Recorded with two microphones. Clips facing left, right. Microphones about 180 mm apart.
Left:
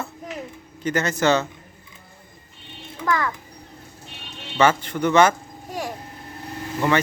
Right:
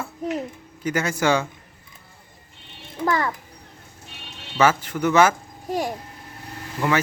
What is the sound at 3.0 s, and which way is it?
Speech, 30° right (ahead or behind).